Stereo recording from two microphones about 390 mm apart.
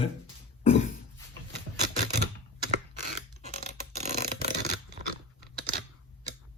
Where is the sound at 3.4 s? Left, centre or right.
Centre.